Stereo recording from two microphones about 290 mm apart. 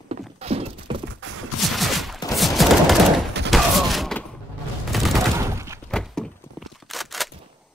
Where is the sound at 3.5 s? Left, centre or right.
Centre.